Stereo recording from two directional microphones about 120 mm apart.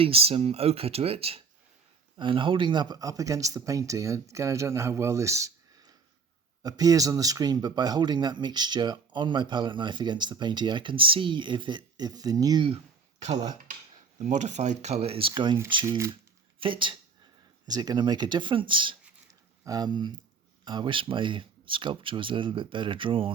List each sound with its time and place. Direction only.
0.0 s speech: 55° right (ahead or behind)
2.1 s speech: 40° right (ahead or behind)
12.6 s a sound: 60° right (ahead or behind)
14.2 s speech: 85° right; by 15.5 s 45° right (ahead or behind)
15.9 s speech: 20° right (ahead or behind)
16.6 s speech: 45° right (ahead or behind)
17.7 s speech: 35° right (ahead or behind)
19.3 s a sound: 30° right (ahead or behind)
20.7 s speech: 40° right (ahead or behind)